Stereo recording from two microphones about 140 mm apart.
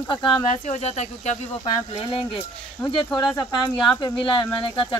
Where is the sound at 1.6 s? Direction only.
40° left (ahead or behind).